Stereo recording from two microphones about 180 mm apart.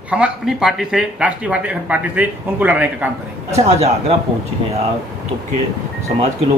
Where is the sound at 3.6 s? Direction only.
35° right (ahead or behind).